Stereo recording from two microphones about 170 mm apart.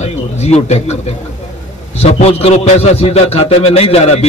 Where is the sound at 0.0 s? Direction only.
40° left (ahead or behind).